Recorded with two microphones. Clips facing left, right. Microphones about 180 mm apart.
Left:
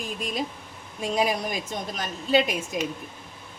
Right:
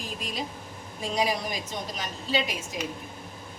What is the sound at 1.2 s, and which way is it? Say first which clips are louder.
A man's voice: left 2 dB; 50° left (ahead or behind).